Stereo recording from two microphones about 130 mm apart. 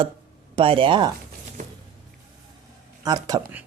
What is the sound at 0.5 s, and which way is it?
Speech, 40° right (ahead or behind).